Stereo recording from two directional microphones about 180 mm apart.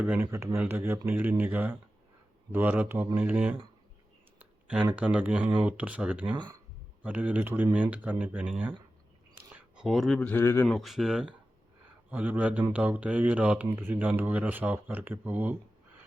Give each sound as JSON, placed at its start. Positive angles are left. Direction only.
{"t": 0.0, "sound": "speech", "side_deg": -10}
{"t": 6.3, "sound": "speech", "side_deg": -25}
{"t": 7.0, "sound": "speech", "side_deg": -10}
{"t": 10.8, "sound": "speech", "side_deg": 0}